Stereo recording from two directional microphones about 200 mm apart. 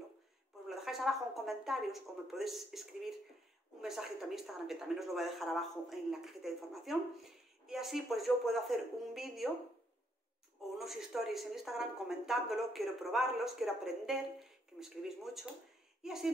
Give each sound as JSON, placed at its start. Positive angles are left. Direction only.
{"t": 0.7, "sound": "speech", "side_deg": 0}
{"t": 10.8, "sound": "speech", "side_deg": 0}